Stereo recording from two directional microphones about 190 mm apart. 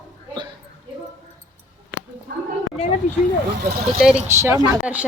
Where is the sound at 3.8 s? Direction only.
Centre (ahead or behind).